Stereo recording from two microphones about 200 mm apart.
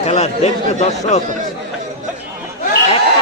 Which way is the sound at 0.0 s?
30° left (ahead or behind).